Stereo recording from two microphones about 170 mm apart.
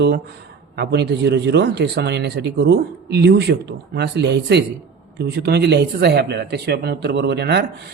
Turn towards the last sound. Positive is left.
turn(degrees=-75)  # may be behind; listen again after turning